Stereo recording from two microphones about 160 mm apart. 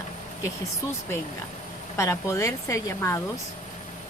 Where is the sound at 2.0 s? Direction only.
20° left (ahead or behind).